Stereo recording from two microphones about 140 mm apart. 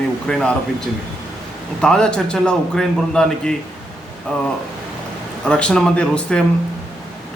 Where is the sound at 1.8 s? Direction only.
5° left (ahead or behind).